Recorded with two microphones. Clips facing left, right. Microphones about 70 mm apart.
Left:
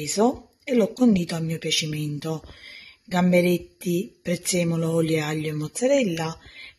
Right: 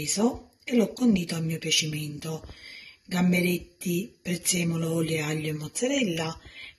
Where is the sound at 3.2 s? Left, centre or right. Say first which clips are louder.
Left 6 dB; left.